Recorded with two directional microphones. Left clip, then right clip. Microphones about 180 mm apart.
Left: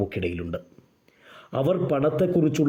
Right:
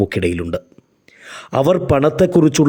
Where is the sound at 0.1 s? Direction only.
30° right (ahead or behind).